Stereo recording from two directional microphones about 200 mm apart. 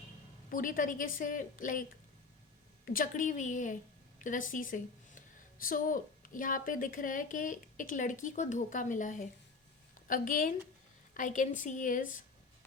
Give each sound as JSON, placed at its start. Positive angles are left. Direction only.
{"t": 0.5, "sound": "a woman's voice", "side_deg": 45}
{"t": 2.8, "sound": "a woman's voice", "side_deg": 45}